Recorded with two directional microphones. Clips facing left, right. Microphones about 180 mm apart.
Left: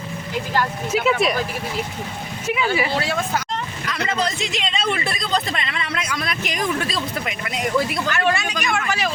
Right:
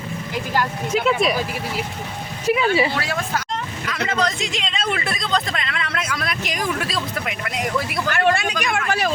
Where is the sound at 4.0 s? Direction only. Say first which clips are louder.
Right 1 dB; 5° left (ahead or behind).